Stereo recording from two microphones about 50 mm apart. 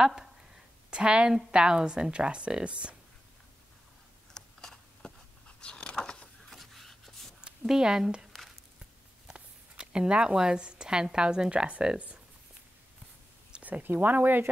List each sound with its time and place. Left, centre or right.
0.0 s speech: centre
4.3 s a sound: centre
5.6 s biting: left
6.5 s a sound: centre
7.4 s speech: centre
9.3 s speech: centre
13.5 s speech: right